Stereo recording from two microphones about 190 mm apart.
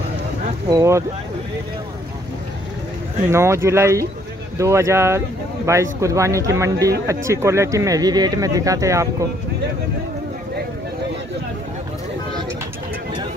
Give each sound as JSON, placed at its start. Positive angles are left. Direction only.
{"t": 0.7, "sound": "speech", "side_deg": -15}
{"t": 3.3, "sound": "speech", "side_deg": -15}